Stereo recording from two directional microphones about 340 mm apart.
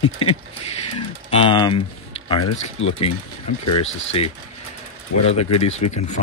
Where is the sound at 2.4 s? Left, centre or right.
Left.